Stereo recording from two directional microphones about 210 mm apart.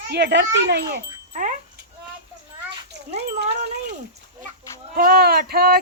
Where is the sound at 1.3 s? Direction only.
35° right (ahead or behind).